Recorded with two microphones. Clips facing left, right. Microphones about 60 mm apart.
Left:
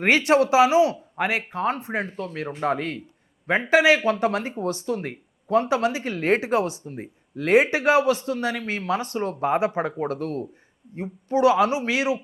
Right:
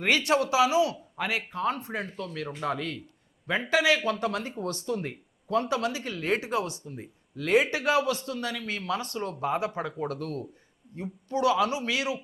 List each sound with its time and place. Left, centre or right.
0.0 s speech: left